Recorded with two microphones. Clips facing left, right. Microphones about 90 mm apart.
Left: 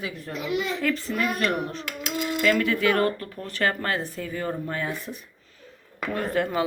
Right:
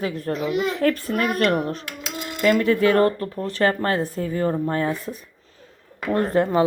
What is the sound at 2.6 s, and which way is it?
Speech, 35° right (ahead or behind).